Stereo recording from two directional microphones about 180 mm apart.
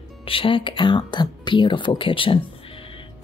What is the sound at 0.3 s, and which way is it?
A woman's voice, 30° left (ahead or behind).